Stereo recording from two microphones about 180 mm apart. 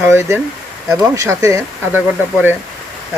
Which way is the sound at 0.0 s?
15° right (ahead or behind).